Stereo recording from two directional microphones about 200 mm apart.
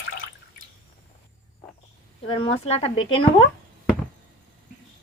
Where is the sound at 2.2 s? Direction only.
25° left (ahead or behind).